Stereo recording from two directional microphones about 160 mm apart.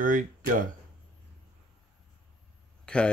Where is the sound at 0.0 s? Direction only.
55° right (ahead or behind).